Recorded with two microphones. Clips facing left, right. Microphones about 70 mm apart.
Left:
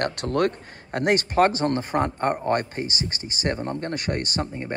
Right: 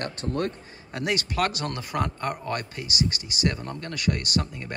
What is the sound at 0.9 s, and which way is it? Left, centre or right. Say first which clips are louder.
Speech: left 6 dB; left.